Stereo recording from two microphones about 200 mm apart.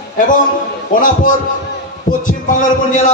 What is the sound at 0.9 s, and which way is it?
Speech, 40° left (ahead or behind).